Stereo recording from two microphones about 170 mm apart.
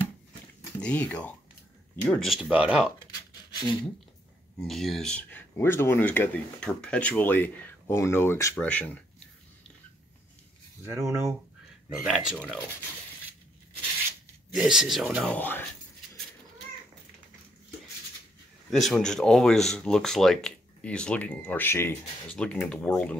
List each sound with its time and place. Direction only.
0.7 s speech: 10° left (ahead or behind)
3.5 s speech: 25° left (ahead or behind)
4.6 s speech: centre (ahead or behind)
10.9 s speech: 15° right (ahead or behind)
12.1 s speech: centre (ahead or behind)
14.5 s speech: 5° right (ahead or behind)
15.2 s speech: 10° left (ahead or behind)
18.7 s speech: centre (ahead or behind)